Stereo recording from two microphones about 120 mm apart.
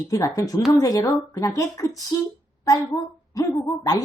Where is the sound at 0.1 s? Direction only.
30° left (ahead or behind).